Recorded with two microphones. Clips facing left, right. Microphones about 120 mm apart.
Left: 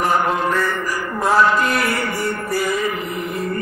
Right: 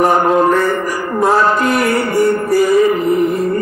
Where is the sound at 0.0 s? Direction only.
40° right (ahead or behind).